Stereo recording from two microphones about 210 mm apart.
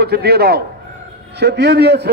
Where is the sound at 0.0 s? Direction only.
50° right (ahead or behind).